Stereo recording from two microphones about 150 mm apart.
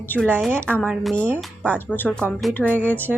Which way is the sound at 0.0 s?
10° left (ahead or behind).